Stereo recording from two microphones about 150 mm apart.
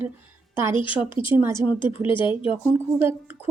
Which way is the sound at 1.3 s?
15° right (ahead or behind).